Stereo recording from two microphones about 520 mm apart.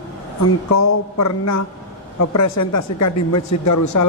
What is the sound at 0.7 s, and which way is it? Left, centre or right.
Speech, left.